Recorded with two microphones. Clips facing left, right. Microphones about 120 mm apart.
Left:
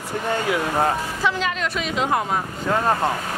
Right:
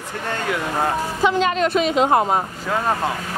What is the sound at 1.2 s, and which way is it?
A woman's voice, 25° right (ahead or behind).